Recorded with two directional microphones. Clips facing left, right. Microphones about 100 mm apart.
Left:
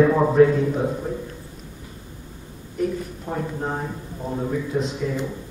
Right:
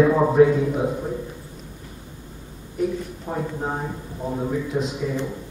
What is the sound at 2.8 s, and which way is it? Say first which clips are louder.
A man's voice: even; 10° right (ahead or behind).